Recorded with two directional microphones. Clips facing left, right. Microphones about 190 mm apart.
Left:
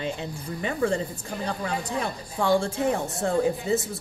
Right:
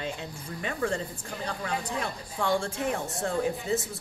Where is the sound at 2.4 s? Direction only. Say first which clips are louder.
Left 5 dB; 35° left (ahead or behind).